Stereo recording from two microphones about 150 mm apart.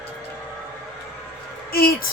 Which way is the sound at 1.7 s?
85° left.